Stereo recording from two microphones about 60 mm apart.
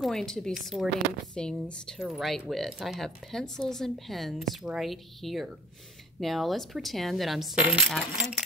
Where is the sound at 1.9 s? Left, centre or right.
Centre.